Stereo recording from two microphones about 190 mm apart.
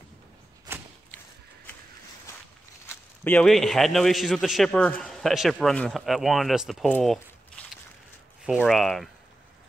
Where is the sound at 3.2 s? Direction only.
5° left (ahead or behind).